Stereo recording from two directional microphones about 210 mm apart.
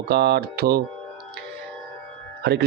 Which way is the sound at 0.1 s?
50° right (ahead or behind).